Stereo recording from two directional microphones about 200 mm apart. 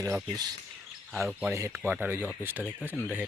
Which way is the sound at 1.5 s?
15° right (ahead or behind).